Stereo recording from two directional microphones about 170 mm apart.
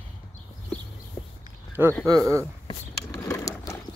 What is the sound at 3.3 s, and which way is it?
Clip-clop, 15° left (ahead or behind).